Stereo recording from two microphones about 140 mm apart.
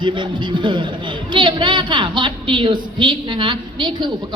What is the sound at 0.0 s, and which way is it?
A woman's voice, 35° right (ahead or behind).